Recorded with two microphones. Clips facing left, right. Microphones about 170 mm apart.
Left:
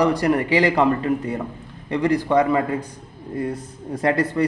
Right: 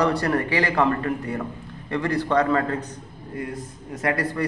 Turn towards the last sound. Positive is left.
turn(degrees=25)  # may be behind; listen again after turning